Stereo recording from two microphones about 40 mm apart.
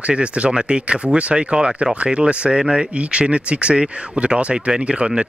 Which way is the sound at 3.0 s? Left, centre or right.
Right.